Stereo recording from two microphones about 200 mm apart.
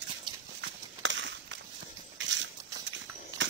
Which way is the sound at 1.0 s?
65° right (ahead or behind).